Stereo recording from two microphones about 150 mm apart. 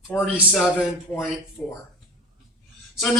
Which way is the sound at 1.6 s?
15° left (ahead or behind).